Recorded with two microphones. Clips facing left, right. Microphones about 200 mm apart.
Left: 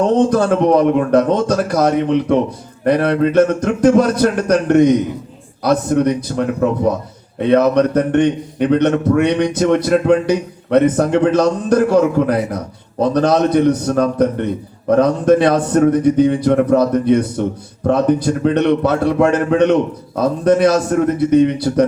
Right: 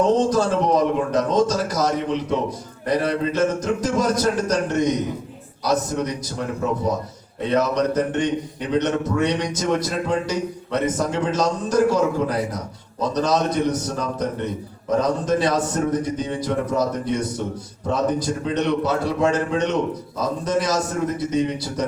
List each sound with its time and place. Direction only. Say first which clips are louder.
0.1 s a man's voice: left 5 dB; 60° left (ahead or behind)